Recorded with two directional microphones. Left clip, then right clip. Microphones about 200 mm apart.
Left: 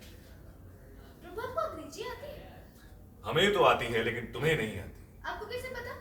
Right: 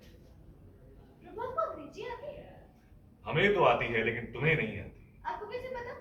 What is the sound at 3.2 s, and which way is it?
Speech, 30° left (ahead or behind).